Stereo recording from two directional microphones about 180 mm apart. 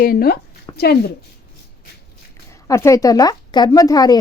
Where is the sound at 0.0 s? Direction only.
55° left (ahead or behind).